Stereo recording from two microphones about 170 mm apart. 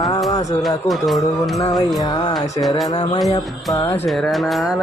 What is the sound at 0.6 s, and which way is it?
Music, centre (ahead or behind).